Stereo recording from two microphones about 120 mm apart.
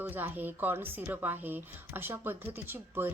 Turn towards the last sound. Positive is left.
turn(degrees=-15)  # may be behind; listen again after turning